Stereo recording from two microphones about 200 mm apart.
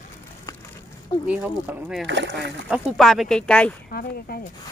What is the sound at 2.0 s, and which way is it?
Speech, 60° right (ahead or behind).